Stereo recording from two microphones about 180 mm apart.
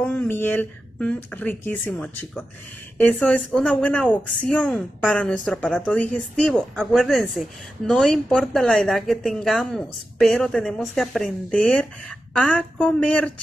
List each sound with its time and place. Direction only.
0.0 s a woman's voice: 10° left (ahead or behind)